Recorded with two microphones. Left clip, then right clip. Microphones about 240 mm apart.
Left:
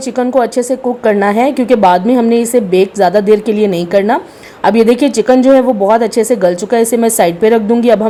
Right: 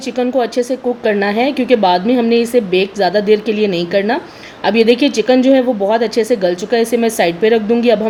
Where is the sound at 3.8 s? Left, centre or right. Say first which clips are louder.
Left 4 dB; left.